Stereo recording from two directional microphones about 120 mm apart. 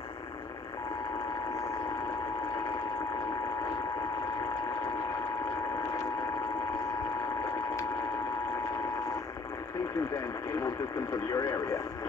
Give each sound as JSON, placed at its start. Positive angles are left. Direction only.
{"t": 11.2, "sound": "speech", "side_deg": 30}